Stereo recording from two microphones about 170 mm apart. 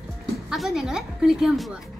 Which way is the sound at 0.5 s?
Centre (ahead or behind).